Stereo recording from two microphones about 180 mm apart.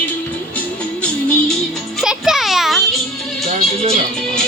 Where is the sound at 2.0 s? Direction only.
5° right (ahead or behind).